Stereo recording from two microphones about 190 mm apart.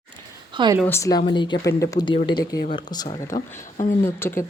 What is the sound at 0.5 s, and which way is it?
Speech, 25° right (ahead or behind).